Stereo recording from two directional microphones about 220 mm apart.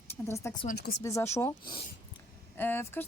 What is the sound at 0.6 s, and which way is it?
Speech, 45° left (ahead or behind).